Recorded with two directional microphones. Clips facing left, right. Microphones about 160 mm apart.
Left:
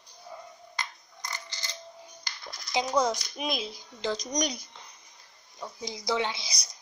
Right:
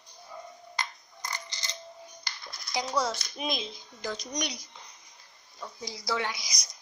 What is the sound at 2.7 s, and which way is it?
Speech, 20° left (ahead or behind).